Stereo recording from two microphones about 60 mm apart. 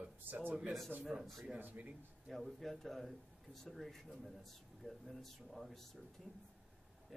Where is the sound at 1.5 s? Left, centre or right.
Right.